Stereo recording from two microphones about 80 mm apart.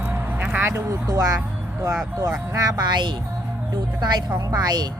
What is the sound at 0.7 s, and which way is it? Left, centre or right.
Speech, right.